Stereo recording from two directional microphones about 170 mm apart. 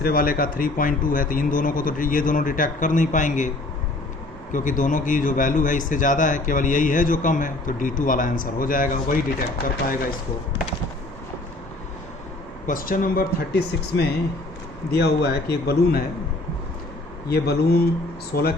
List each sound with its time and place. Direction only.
0.0 s a man's voice: 60° left (ahead or behind)
4.5 s a man's voice: 50° left (ahead or behind)
12.6 s a man's voice: 55° left (ahead or behind)
17.2 s a man's voice: 65° left (ahead or behind)